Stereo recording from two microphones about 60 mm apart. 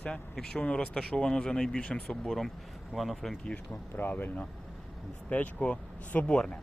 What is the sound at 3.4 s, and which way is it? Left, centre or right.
Speech, centre.